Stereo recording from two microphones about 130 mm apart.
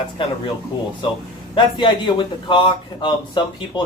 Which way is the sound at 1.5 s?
35° left (ahead or behind).